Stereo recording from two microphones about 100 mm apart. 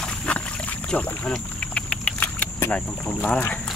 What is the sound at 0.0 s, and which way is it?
Rowboat, 10° left (ahead or behind).